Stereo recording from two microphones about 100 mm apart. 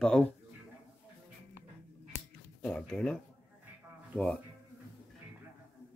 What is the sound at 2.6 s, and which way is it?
Speech, 10° left (ahead or behind).